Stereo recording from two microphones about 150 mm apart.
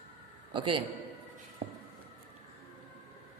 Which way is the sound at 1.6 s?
45° right (ahead or behind).